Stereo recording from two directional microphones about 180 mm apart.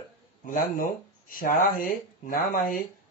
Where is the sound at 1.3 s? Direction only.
50° left (ahead or behind).